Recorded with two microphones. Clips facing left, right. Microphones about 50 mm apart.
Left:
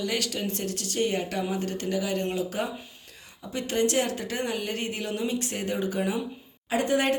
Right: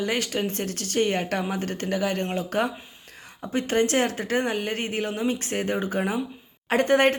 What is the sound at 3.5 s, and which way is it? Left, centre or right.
A woman's voice, right.